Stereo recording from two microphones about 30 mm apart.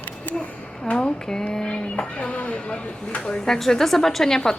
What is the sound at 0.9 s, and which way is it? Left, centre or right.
Speech, left.